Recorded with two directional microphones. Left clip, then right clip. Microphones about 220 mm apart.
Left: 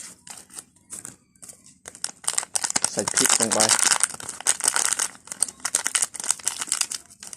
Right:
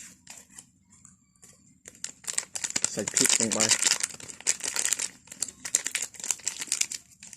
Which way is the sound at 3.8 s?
Centre (ahead or behind).